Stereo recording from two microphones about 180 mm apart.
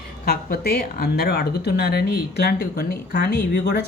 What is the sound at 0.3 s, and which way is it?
Speech, 55° left (ahead or behind).